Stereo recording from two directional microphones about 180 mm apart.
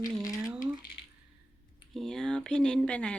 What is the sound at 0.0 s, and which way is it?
Speech, 20° left (ahead or behind).